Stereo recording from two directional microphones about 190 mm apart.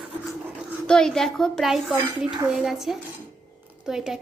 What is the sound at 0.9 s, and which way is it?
A woman's voice, 5° left (ahead or behind).